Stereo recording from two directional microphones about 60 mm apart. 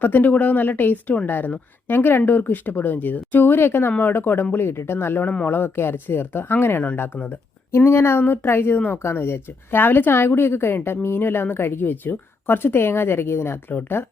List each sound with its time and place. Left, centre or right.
0.0 s a woman's voice: left
7.9 s a woman's voice: left